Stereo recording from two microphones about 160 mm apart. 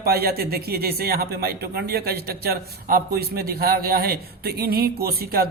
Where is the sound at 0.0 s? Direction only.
75° right (ahead or behind).